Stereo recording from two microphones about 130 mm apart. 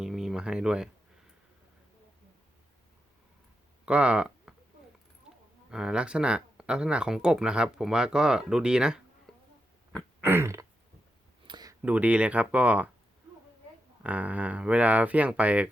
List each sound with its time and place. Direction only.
0.0 s a sound: 5° right (ahead or behind)
3.8 s speech: 10° right (ahead or behind)
5.7 s speech: 5° right (ahead or behind)
10.2 s throat clearing: 15° right (ahead or behind)
11.4 s a sound: 30° right (ahead or behind)
11.8 s speech: 10° right (ahead or behind)
14.0 s speech: 10° right (ahead or behind)